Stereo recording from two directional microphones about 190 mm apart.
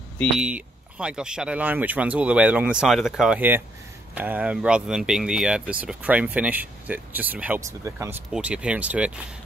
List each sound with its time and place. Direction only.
0.4 s speech: 5° right (ahead or behind)